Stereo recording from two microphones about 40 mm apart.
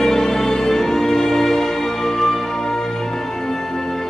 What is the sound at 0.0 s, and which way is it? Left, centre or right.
Music, centre.